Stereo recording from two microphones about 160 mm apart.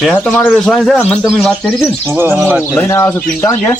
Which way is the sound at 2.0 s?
15° right (ahead or behind).